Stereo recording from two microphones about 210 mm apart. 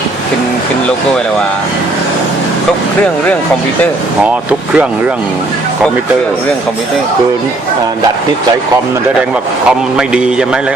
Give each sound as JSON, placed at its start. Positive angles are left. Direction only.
{"t": 9.6, "sound": "a man's voice", "side_deg": -5}